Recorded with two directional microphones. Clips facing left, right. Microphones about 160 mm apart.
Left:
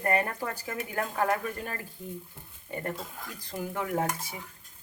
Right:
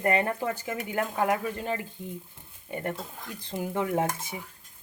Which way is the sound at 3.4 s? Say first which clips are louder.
Right 4 dB; 25° right (ahead or behind).